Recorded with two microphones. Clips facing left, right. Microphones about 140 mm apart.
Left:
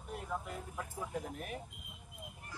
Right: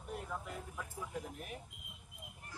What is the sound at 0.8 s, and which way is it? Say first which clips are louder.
Speech: left 5 dB; 50° left (ahead or behind).